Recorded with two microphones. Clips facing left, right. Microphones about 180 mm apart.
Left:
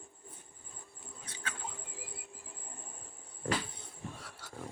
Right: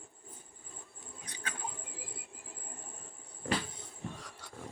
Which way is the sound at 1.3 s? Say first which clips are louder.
Even; 15° right (ahead or behind).